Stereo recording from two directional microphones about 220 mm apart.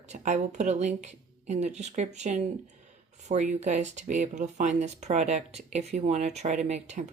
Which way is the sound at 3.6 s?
30° right (ahead or behind).